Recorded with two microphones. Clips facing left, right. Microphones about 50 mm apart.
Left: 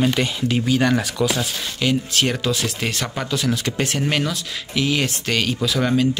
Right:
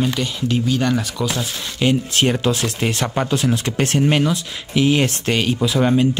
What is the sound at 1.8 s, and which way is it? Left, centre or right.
Speech, right.